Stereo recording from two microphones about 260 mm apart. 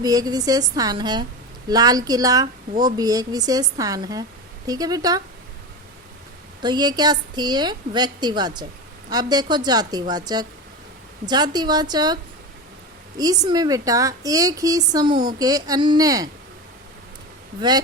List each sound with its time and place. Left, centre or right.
0.0 s speech: centre
6.6 s speech: centre
17.6 s speech: centre